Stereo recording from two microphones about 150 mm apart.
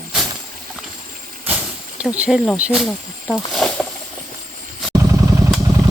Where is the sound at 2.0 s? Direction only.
10° right (ahead or behind).